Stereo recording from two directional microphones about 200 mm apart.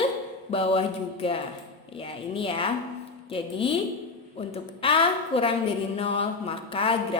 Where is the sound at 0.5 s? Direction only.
30° left (ahead or behind).